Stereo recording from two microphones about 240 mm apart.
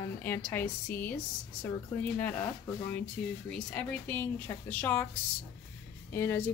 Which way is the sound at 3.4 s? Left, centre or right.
Centre.